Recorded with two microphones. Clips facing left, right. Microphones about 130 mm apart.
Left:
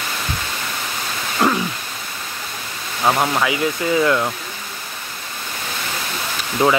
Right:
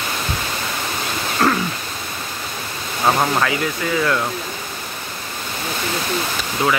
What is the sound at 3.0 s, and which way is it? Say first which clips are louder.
Speech: even; centre (ahead or behind).